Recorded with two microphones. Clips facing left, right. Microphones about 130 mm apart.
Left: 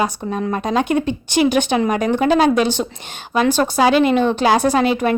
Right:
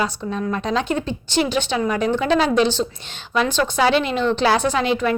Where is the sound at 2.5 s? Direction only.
15° left (ahead or behind).